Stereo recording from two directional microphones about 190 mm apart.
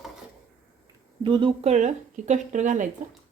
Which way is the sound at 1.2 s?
25° right (ahead or behind).